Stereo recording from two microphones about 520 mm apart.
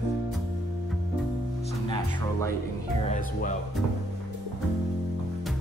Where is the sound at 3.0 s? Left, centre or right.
Centre.